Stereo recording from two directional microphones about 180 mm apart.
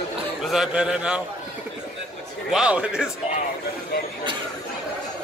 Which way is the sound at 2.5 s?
5° right (ahead or behind).